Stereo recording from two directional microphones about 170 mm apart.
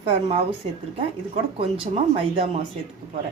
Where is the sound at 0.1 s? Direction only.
30° right (ahead or behind).